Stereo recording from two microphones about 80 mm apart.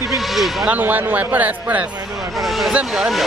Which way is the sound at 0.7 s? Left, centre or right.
Right.